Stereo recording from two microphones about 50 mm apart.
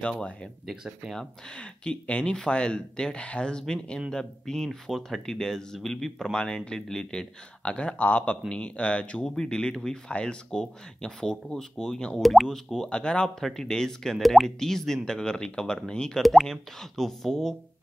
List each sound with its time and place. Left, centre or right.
0.0 s speech: centre
1.5 s speech: left; by 6.3 s centre
6.3 s speech: centre
7.6 s speech: left
12.2 s speech: centre
12.4 s speech: centre
13.4 s speech: centre
14.1 s speech: centre
16.2 s speech: centre